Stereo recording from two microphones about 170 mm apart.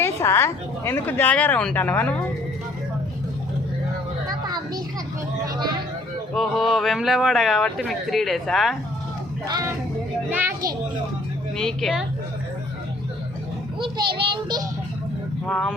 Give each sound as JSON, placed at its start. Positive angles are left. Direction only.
{"t": 0.0, "sound": "a woman's voice", "side_deg": 15}
{"t": 4.3, "sound": "a sound", "side_deg": -20}
{"t": 6.3, "sound": "speech", "side_deg": 0}
{"t": 9.5, "sound": "a child's voice", "side_deg": -20}
{"t": 11.5, "sound": "speech", "side_deg": 5}
{"t": 13.8, "sound": "a child's voice", "side_deg": -30}
{"t": 15.4, "sound": "speech", "side_deg": 5}